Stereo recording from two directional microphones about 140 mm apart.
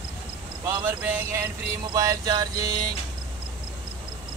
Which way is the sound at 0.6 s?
15° right (ahead or behind).